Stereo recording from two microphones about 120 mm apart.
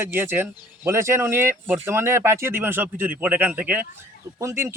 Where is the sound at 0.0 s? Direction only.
20° right (ahead or behind).